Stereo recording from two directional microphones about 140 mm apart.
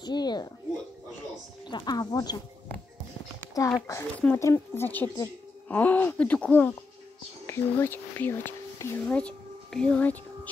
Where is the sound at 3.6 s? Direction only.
25° left (ahead or behind).